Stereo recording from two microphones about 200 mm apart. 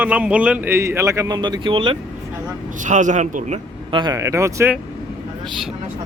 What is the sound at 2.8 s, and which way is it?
A man's voice, 40° right (ahead or behind).